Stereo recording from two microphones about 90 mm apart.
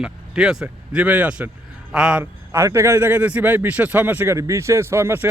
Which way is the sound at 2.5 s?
30° right (ahead or behind).